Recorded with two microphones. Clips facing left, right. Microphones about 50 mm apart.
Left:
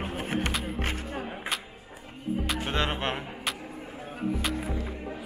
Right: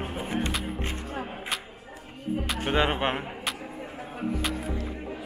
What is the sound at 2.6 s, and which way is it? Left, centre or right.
Speech, centre.